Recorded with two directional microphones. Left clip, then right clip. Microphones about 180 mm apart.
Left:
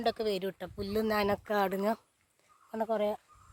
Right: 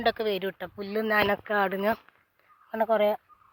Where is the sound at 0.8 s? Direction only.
20° left (ahead or behind).